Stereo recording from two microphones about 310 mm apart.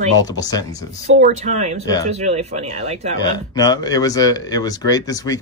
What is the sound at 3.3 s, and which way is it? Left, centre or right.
Speech, centre.